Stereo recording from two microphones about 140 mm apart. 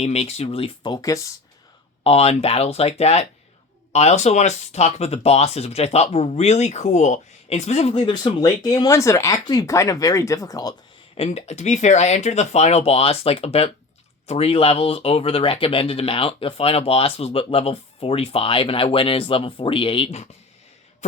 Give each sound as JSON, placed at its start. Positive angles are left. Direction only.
{"t": 0.0, "sound": "speech", "side_deg": 50}
{"t": 2.0, "sound": "speech", "side_deg": 45}
{"t": 7.9, "sound": "speech", "side_deg": 35}
{"t": 11.1, "sound": "speech", "side_deg": 45}
{"t": 21.0, "sound": "throat clearing", "side_deg": 55}